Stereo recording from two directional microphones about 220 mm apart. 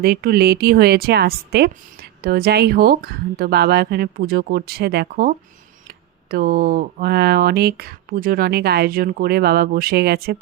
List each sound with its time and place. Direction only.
0.0 s a woman's voice: 45° right (ahead or behind)
6.3 s a woman's voice: 40° right (ahead or behind)